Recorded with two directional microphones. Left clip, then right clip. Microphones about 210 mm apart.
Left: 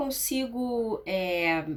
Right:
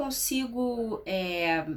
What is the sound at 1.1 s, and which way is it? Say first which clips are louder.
Speech: left 1 dB; 5° left (ahead or behind).